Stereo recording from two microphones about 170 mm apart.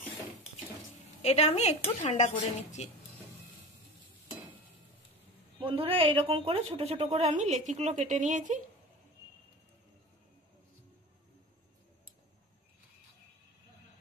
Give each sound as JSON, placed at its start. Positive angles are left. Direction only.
{"t": 1.2, "sound": "a woman's voice", "side_deg": 40}
{"t": 5.6, "sound": "a woman's voice", "side_deg": -30}